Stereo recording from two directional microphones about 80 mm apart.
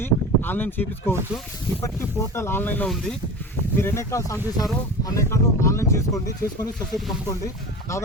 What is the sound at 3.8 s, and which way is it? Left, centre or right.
Speech, left.